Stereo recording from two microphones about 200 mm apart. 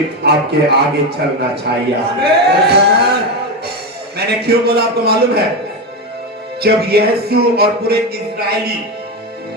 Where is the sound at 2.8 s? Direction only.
55° right (ahead or behind).